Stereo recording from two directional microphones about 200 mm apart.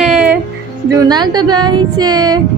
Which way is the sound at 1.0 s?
20° right (ahead or behind).